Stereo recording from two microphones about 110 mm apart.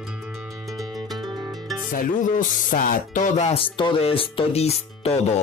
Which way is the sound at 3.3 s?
65° left (ahead or behind).